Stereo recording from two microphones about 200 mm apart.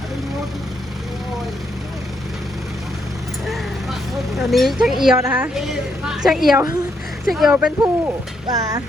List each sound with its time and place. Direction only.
3.4 s vehicle: centre (ahead or behind)
4.4 s a woman's voice: centre (ahead or behind)
7.8 s a sound: 20° right (ahead or behind)